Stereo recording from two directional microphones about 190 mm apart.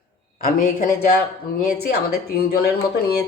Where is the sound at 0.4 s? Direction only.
45° left (ahead or behind).